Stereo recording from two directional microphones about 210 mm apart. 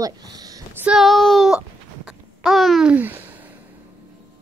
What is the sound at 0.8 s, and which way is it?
Child singing, centre (ahead or behind).